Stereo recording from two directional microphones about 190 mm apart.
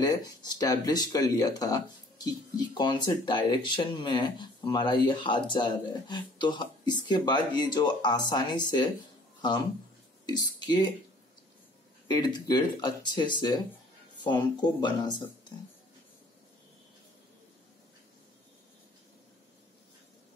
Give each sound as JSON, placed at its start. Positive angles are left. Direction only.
{"t": 0.0, "sound": "speech", "side_deg": 20}
{"t": 10.2, "sound": "speech", "side_deg": 20}
{"t": 12.1, "sound": "speech", "side_deg": 20}